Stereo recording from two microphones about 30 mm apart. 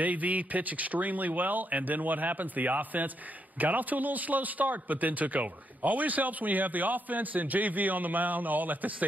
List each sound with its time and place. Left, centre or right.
0.0 s a man's voice: right